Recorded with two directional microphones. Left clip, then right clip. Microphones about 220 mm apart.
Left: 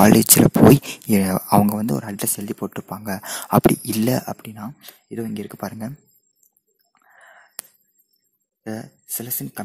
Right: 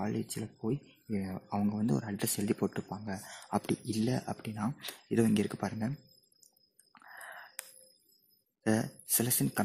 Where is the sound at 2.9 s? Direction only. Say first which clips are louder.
Left 13 dB; 35° left (ahead or behind); by 5.5 s 5° left (ahead or behind).